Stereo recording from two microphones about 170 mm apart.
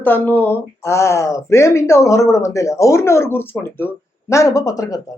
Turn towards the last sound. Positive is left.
turn(degrees=20)  # may be behind; listen again after turning